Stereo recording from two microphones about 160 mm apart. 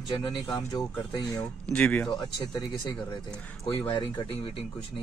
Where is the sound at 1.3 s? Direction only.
5° left (ahead or behind).